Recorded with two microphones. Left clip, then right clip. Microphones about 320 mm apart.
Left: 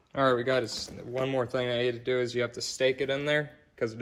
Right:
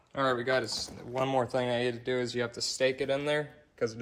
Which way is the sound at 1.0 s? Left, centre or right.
Centre.